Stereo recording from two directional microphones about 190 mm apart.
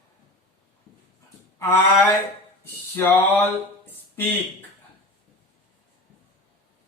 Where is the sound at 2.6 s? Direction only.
15° left (ahead or behind).